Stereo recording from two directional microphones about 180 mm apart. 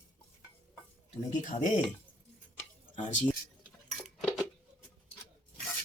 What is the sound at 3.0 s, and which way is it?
Speech, 45° left (ahead or behind).